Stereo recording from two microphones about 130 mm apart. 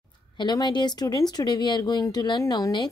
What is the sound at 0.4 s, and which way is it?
Speech, 35° left (ahead or behind).